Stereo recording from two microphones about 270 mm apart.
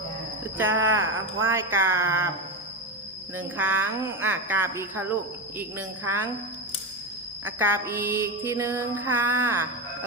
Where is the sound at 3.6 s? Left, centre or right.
Centre.